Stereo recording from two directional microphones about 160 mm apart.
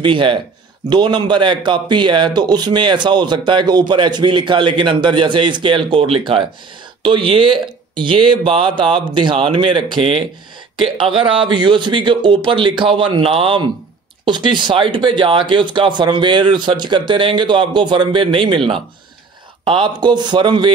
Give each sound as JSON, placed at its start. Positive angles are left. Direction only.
{"t": 0.0, "sound": "speech", "side_deg": -30}
{"t": 19.6, "sound": "speech", "side_deg": -30}